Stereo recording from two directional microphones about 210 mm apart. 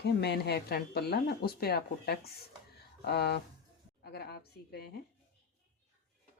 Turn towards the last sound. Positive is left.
turn(degrees=50)  # may be behind; listen again after turning